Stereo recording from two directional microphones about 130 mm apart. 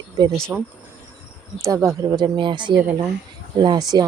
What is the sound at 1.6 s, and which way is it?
A woman's voice, 25° right (ahead or behind).